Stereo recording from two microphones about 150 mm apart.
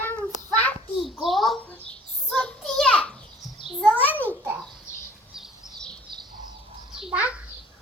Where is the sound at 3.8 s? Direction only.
10° left (ahead or behind).